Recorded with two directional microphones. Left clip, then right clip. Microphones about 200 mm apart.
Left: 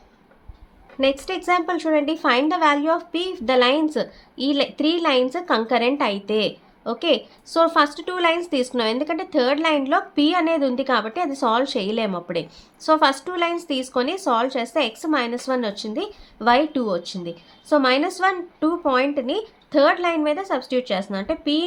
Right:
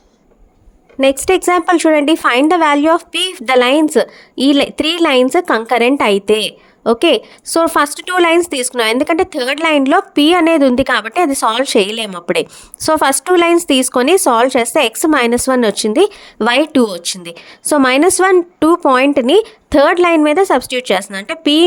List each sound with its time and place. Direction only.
0.9 s a woman's voice: 50° right (ahead or behind)